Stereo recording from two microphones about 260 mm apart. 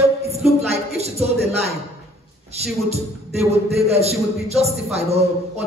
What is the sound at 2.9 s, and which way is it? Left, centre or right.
Speech, right.